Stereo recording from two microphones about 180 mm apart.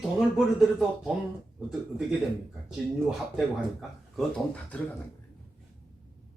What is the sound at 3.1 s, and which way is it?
Speech, centre (ahead or behind).